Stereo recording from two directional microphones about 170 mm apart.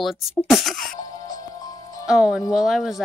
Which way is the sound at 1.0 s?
20° left (ahead or behind).